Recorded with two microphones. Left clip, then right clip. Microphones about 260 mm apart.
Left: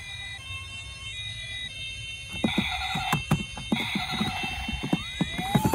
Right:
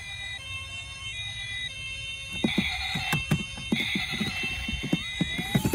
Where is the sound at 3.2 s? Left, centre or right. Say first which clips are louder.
Even; centre.